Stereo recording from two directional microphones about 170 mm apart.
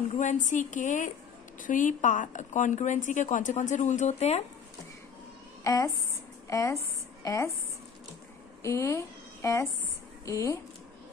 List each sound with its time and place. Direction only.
0.1 s speech: 45° left (ahead or behind)
5.6 s a woman's voice: 20° left (ahead or behind)
8.6 s speech: 15° left (ahead or behind)